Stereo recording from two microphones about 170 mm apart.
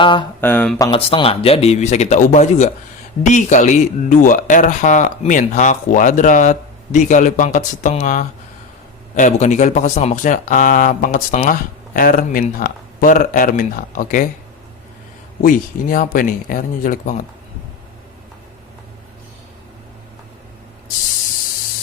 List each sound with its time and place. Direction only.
0.0 s speech: 30° left (ahead or behind)
0.4 s speech: 10° left (ahead or behind)
0.9 s a man's voice: 35° left (ahead or behind); by 14.3 s 50° left (ahead or behind)
15.4 s speech: 55° left (ahead or behind)